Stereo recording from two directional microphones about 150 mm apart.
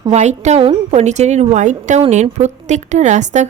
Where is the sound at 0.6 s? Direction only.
40° right (ahead or behind).